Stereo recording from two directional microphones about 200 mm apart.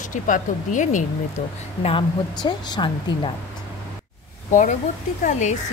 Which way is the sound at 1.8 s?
25° left (ahead or behind).